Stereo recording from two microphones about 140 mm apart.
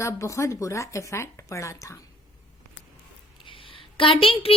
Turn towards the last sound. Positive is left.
turn(degrees=40)  # may be behind; listen again after turning